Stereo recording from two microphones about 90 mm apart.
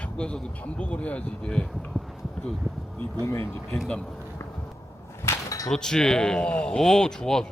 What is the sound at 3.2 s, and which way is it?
Speech, 30° left (ahead or behind).